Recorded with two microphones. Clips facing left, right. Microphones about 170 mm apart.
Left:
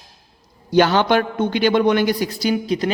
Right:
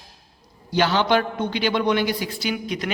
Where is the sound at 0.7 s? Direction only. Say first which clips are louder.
Left 4 dB; 50° left (ahead or behind).